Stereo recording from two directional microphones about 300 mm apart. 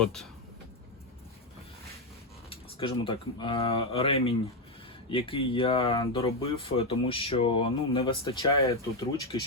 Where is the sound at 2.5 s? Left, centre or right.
Centre.